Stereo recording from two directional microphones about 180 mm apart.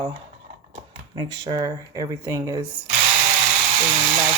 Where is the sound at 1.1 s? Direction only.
20° right (ahead or behind).